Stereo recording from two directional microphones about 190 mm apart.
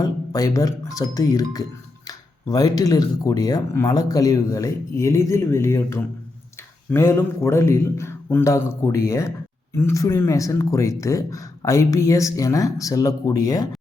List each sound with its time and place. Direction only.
0.0 s speech: 20° left (ahead or behind)